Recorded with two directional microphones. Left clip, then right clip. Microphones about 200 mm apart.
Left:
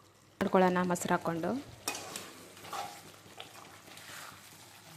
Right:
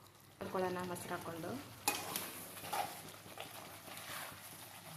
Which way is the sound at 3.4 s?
Centre (ahead or behind).